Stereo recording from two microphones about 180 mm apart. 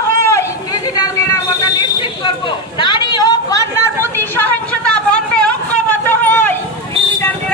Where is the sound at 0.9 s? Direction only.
20° left (ahead or behind).